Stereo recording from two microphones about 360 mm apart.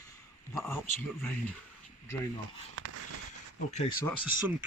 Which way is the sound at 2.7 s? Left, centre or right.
Right.